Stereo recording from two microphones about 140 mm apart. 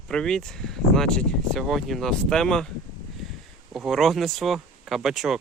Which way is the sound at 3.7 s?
Centre (ahead or behind).